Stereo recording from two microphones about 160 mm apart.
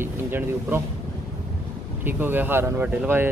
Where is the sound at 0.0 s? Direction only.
15° right (ahead or behind).